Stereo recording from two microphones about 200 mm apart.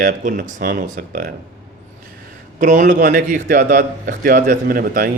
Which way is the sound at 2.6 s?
40° right (ahead or behind).